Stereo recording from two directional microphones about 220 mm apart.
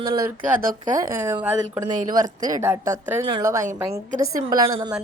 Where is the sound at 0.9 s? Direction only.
10° right (ahead or behind).